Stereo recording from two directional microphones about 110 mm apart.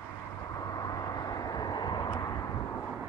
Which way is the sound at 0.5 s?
35° left (ahead or behind).